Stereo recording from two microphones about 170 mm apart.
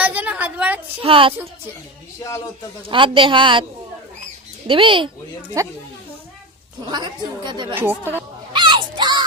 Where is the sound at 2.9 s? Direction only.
30° right (ahead or behind).